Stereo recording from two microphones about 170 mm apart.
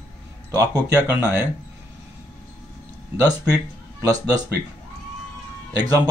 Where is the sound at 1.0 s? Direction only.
10° right (ahead or behind).